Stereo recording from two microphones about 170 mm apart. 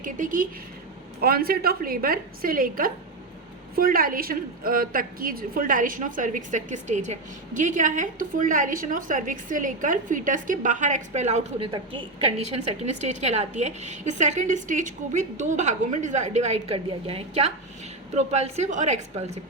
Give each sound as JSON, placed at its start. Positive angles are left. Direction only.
{"t": 0.0, "sound": "a woman's voice", "side_deg": -50}
{"t": 1.2, "sound": "a woman's voice", "side_deg": -60}
{"t": 11.6, "sound": "a woman's voice", "side_deg": -30}